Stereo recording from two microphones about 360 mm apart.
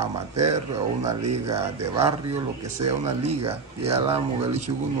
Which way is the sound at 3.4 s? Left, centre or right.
Centre.